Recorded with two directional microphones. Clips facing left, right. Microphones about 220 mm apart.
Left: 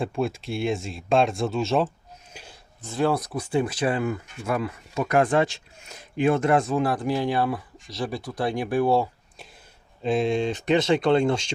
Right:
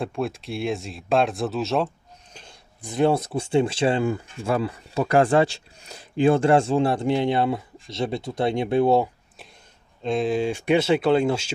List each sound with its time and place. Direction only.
0.0 s speech: centre (ahead or behind)
2.3 s a sound: 10° left (ahead or behind)
2.8 s speech: 20° right (ahead or behind)
10.0 s speech: centre (ahead or behind)